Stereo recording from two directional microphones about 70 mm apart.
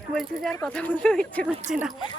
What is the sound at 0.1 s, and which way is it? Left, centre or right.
Speech, centre.